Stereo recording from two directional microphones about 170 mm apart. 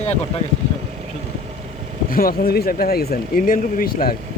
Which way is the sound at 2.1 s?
60° left (ahead or behind).